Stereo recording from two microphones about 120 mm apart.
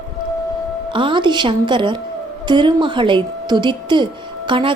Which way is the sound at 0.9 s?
45° right (ahead or behind).